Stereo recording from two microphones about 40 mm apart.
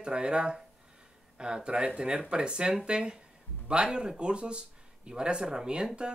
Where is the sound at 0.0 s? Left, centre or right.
Right.